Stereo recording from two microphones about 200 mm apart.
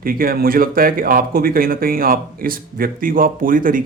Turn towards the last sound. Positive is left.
turn(degrees=-45)  # may be behind; listen again after turning